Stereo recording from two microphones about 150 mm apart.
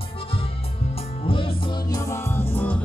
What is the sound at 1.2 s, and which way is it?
Music, 35° left (ahead or behind).